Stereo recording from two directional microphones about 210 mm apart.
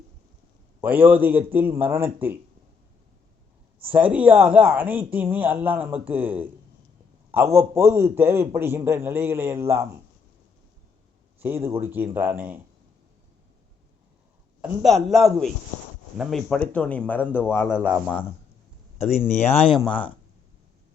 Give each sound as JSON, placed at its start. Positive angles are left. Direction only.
{"t": 0.8, "sound": "speech", "side_deg": -10}
{"t": 3.8, "sound": "speech", "side_deg": -5}
{"t": 11.3, "sound": "speech", "side_deg": -10}
{"t": 14.6, "sound": "a man's voice", "side_deg": -5}
{"t": 17.7, "sound": "a man's voice", "side_deg": -5}
{"t": 19.1, "sound": "speech", "side_deg": 30}